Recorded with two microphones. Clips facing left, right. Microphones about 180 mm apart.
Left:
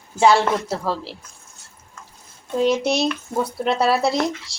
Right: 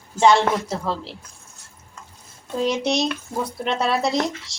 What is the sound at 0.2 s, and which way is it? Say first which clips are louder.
Speech: even; 5° left (ahead or behind).